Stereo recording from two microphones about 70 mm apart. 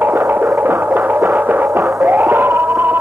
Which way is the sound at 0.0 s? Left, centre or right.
Right.